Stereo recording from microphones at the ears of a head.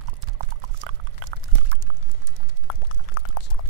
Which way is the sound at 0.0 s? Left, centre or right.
Right.